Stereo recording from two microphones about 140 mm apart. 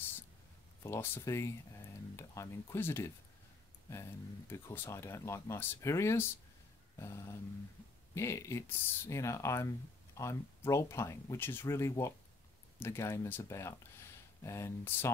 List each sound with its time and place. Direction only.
0.8 s speech: 20° left (ahead or behind)